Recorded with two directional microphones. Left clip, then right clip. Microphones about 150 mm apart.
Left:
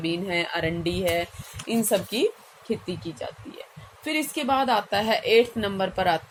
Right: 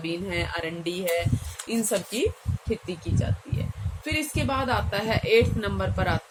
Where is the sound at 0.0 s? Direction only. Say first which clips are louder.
Left 3 dB; 35° left (ahead or behind).